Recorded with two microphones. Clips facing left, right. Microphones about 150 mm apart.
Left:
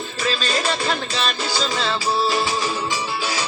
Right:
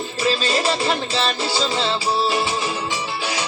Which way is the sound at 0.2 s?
30° right (ahead or behind).